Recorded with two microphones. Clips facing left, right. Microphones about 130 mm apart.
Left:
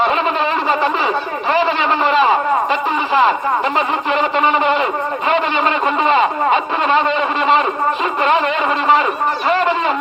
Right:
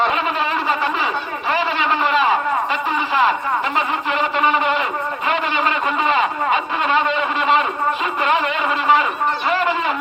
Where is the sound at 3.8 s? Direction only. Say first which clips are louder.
Left 3 dB; 5° right (ahead or behind).